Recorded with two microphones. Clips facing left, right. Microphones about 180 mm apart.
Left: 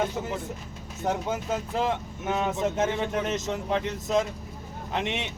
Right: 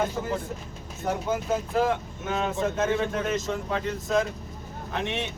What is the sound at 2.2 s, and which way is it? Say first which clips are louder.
Speech: left 1 dB; 20° left (ahead or behind).